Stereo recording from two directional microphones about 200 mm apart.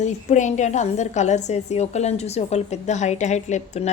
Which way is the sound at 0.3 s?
35° left (ahead or behind).